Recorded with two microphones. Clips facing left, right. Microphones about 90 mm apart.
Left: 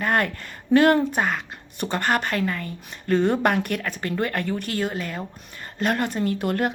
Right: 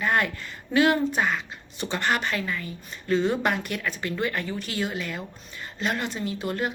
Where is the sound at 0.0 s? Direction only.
55° left (ahead or behind).